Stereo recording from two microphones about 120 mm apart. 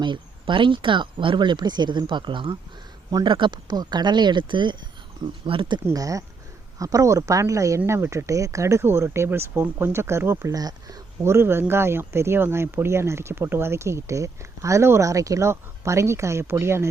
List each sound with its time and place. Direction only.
0.0 s speech: 40° right (ahead or behind)
5.8 s speech: 30° right (ahead or behind)
11.2 s speech: 20° right (ahead or behind)